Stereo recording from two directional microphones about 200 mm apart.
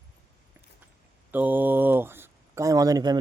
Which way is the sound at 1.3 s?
10° right (ahead or behind).